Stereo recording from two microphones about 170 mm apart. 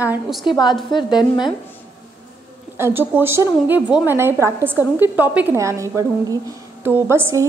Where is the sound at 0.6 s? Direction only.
25° left (ahead or behind).